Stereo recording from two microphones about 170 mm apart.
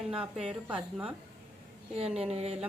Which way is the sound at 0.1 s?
5° right (ahead or behind).